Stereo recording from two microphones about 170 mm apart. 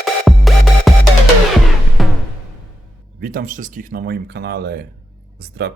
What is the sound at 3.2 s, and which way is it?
Speech, 60° right (ahead or behind).